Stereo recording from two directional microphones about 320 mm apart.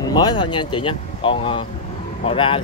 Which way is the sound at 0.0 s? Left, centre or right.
Centre.